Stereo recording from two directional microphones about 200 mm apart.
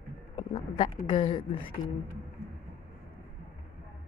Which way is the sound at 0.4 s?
25° left (ahead or behind).